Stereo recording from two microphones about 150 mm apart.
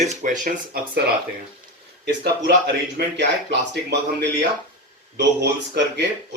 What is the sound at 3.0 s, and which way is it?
Speech, 90° right.